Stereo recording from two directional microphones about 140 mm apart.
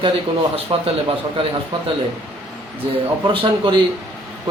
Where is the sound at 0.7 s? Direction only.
40° right (ahead or behind).